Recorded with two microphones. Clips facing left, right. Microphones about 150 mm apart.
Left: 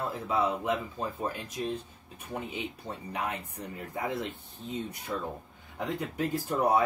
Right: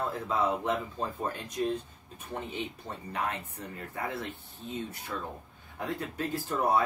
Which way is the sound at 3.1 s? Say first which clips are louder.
Right 1 dB; 15° left (ahead or behind).